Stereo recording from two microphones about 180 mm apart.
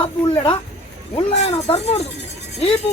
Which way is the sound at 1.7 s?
35° left (ahead or behind).